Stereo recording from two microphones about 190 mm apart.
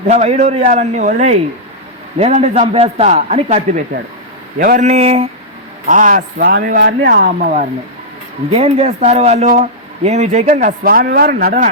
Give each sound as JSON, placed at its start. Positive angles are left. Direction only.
{"t": 0.1, "sound": "a man's voice", "side_deg": -35}
{"t": 4.9, "sound": "a man's voice", "side_deg": -35}
{"t": 5.9, "sound": "a man's voice", "side_deg": -45}
{"t": 6.7, "sound": "speech", "side_deg": -65}
{"t": 7.3, "sound": "a man's voice", "side_deg": -40}